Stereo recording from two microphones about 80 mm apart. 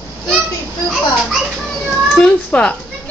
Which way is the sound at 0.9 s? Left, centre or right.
Centre.